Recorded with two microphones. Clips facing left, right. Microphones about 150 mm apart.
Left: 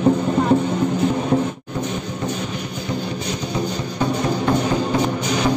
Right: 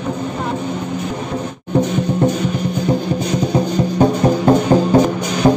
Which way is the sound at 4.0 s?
45° right (ahead or behind).